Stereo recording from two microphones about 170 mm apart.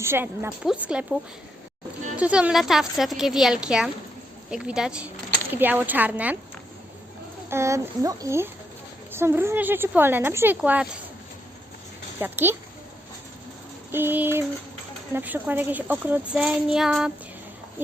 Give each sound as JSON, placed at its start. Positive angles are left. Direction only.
{"t": 0.0, "sound": "a child's voice", "side_deg": -15}
{"t": 2.1, "sound": "a woman's voice", "side_deg": -10}
{"t": 7.5, "sound": "a child's voice", "side_deg": -15}
{"t": 12.2, "sound": "a child's voice", "side_deg": -15}
{"t": 13.9, "sound": "a child's voice", "side_deg": -10}